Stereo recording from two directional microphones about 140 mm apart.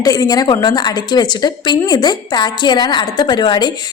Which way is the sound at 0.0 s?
25° left (ahead or behind).